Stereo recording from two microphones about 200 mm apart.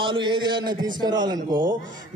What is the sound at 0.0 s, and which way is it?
A man's voice, 25° right (ahead or behind).